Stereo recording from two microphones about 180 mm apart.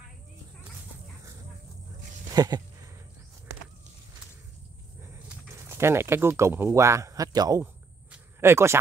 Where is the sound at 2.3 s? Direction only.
20° right (ahead or behind).